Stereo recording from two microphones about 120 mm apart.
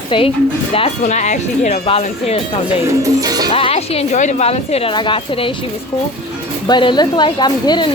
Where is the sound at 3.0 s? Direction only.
30° right (ahead or behind).